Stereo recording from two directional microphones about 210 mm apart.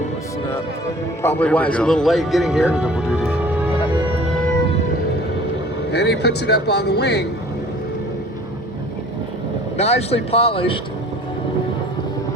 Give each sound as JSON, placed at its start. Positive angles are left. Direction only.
{"t": 1.2, "sound": "speech", "side_deg": 10}
{"t": 5.9, "sound": "speech", "side_deg": 50}
{"t": 9.7, "sound": "speech", "side_deg": 30}